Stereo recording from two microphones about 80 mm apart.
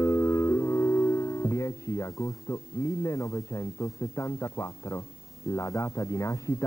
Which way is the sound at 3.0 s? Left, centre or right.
Left.